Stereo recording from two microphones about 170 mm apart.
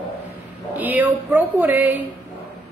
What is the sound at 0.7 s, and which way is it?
Music, 10° right (ahead or behind).